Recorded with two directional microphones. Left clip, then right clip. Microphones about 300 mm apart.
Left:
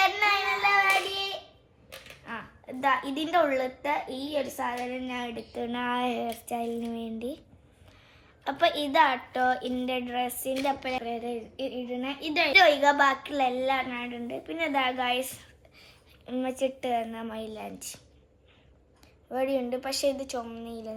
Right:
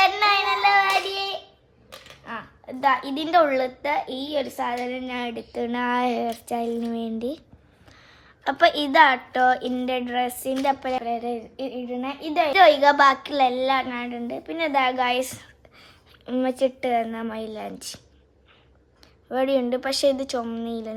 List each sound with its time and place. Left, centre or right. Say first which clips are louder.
0.0 s child singing: right 5 dB; right
2.2 s a woman's voice: right 5 dB; right
8.4 s a woman's voice: right 6 dB; right
19.3 s a woman's voice: right 6 dB; right